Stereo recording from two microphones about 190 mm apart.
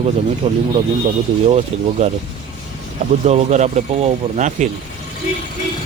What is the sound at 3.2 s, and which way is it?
Speech, 35° right (ahead or behind).